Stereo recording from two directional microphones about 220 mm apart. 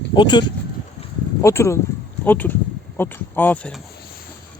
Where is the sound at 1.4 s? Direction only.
15° left (ahead or behind).